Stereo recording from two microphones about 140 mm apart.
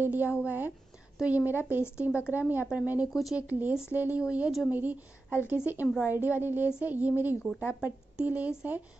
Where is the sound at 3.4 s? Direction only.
10° right (ahead or behind).